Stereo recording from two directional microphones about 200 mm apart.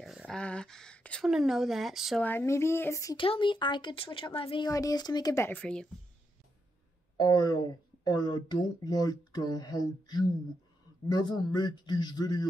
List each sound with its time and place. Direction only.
0.0 s a woman's voice: centre (ahead or behind)
2.2 s speech: 10° left (ahead or behind)
7.2 s speech: 20° left (ahead or behind)